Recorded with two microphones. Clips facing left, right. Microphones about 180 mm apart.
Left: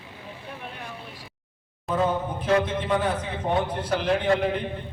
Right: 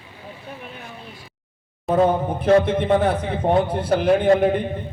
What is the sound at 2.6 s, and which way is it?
A man's voice, 60° right (ahead or behind).